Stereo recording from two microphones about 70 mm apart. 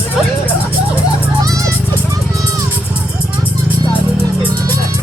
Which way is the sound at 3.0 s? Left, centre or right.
Right.